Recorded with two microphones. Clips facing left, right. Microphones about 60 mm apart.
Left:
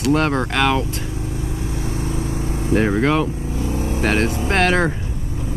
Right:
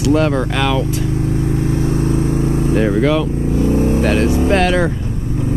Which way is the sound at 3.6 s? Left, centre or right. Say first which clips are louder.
Right 9 dB; right.